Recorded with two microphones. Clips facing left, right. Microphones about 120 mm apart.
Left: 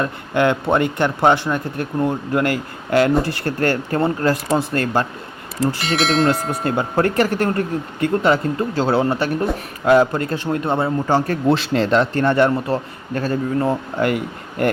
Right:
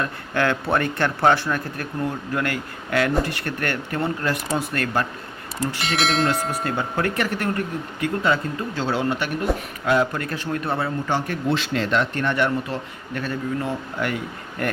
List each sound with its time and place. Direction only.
0.0 s speech: 20° left (ahead or behind)
5.8 s speech: centre (ahead or behind)
6.5 s speech: 30° left (ahead or behind)
11.0 s speech: 40° left (ahead or behind)